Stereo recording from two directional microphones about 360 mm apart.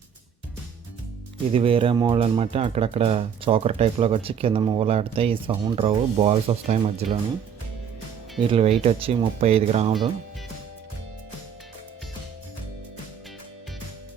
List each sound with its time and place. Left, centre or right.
1.5 s speech: centre
8.4 s speech: centre